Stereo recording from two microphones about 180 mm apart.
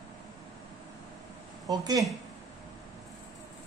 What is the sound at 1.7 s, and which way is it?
Speech, 20° right (ahead or behind).